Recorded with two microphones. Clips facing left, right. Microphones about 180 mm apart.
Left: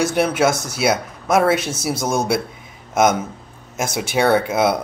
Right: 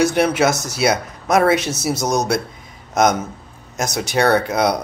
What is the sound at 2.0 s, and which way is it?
Speech, 20° right (ahead or behind).